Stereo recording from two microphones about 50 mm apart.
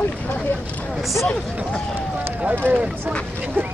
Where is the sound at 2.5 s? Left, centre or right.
Right.